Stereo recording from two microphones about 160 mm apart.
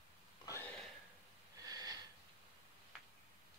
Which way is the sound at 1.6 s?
25° right (ahead or behind).